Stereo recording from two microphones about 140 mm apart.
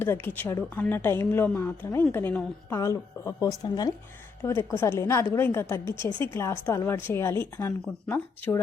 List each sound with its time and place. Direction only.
0.0 s a woman's voice: 15° left (ahead or behind)